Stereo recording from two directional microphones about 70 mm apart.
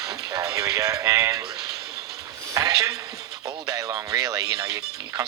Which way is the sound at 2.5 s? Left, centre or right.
Right.